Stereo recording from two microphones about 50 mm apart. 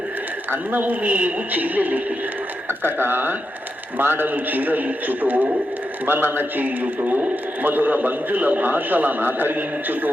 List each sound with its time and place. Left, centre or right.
0.5 s a man's voice: right